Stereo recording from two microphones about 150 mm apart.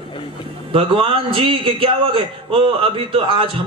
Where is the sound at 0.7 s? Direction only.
35° right (ahead or behind).